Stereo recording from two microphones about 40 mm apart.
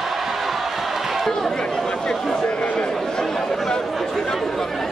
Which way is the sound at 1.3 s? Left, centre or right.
Centre.